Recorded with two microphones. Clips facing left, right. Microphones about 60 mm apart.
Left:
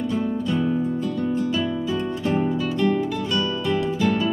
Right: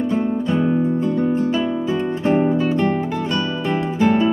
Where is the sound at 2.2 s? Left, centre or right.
Right.